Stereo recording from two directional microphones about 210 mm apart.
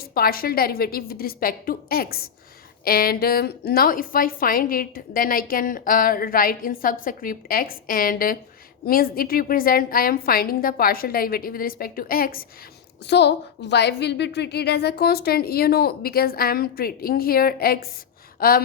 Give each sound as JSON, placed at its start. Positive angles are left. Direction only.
{"t": 0.1, "sound": "a woman's voice", "side_deg": 45}
{"t": 13.1, "sound": "a woman's voice", "side_deg": 55}